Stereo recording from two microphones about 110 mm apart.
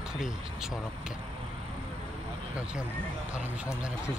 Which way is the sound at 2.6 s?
10° right (ahead or behind).